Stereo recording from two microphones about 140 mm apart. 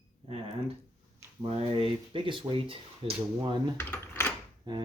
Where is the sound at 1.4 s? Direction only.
40° right (ahead or behind).